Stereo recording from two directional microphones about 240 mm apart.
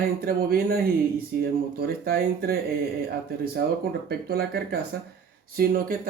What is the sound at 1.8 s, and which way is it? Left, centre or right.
Speech, right.